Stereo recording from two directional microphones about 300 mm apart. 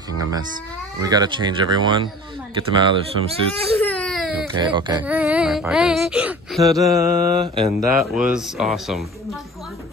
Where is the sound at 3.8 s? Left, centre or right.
Centre.